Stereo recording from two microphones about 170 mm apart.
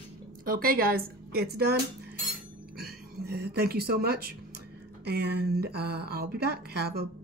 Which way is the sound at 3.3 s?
70° right (ahead or behind).